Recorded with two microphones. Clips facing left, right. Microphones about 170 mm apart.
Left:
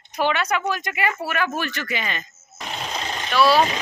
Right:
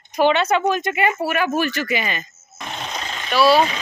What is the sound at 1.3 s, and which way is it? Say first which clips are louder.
Speech: right 5 dB; 10° right (ahead or behind).